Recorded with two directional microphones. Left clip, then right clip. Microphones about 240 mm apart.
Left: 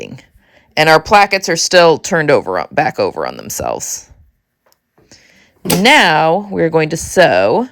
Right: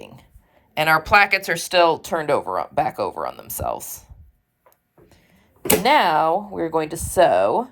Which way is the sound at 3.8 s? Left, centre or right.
Left.